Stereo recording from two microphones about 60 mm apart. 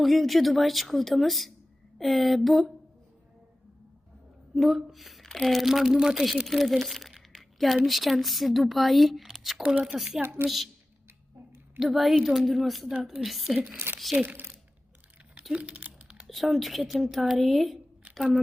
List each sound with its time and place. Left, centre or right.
0.0 s speech: centre
4.5 s speech: centre
6.5 s crumpling: centre
7.9 s speech: centre
10.2 s a woman's voice: right
11.8 s speech: centre
14.2 s speech: right
15.5 s typing: right
16.2 s speech: centre